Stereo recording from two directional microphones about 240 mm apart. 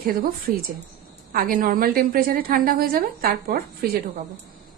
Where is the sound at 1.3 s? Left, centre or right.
Right.